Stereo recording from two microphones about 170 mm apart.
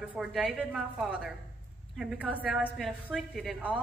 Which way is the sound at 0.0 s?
5° right (ahead or behind).